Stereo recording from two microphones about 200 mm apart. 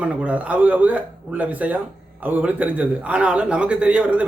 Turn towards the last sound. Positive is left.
turn(degrees=-5)  # may be behind; listen again after turning